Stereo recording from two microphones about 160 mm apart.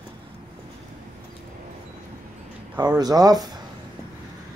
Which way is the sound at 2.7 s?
25° right (ahead or behind).